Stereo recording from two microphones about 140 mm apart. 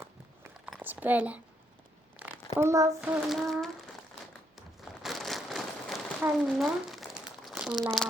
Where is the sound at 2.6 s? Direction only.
20° right (ahead or behind).